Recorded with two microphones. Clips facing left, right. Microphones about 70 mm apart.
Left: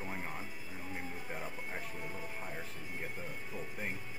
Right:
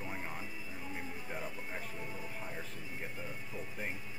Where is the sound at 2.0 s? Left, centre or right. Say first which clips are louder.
Left 1 dB; left.